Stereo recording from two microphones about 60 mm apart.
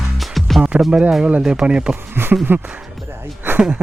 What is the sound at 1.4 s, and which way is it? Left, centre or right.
Speech, centre.